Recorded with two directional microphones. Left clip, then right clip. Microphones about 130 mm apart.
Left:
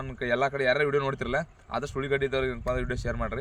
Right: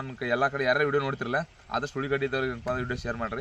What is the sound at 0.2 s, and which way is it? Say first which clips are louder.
Speech: even; 45° left (ahead or behind).